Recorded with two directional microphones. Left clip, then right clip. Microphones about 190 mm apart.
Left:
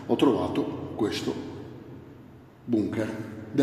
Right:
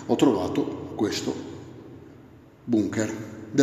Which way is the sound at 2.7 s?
30° right (ahead or behind).